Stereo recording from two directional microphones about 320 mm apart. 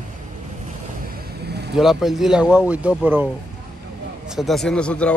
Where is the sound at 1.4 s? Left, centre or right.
Right.